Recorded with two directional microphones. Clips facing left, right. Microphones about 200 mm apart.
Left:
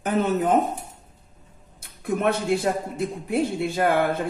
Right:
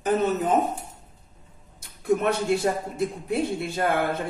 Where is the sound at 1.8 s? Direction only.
55° left (ahead or behind).